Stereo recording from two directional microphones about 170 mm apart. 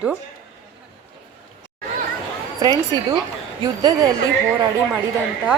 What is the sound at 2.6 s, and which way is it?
Speech, 20° right (ahead or behind).